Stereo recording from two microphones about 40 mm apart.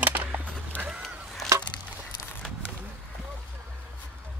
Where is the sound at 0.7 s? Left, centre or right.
Left.